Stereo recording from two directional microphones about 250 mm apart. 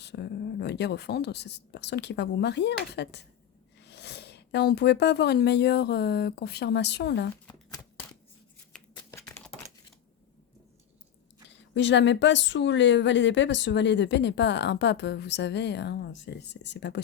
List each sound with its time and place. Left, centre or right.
0.0 s a woman's voice: left
7.4 s shuffling cards: centre
8.7 s typing: centre
11.4 s a woman's voice: left